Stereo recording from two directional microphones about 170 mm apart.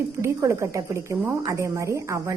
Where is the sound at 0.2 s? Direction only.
15° right (ahead or behind).